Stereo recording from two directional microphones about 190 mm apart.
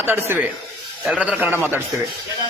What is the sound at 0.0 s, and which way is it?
A man's voice, 10° right (ahead or behind).